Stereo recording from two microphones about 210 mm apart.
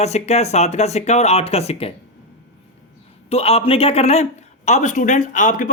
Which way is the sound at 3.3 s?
30° left (ahead or behind).